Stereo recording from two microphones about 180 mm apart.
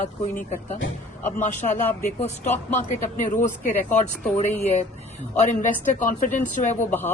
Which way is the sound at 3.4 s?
45° left (ahead or behind).